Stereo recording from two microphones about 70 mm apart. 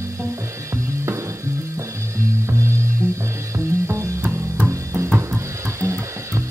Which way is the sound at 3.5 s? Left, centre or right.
Right.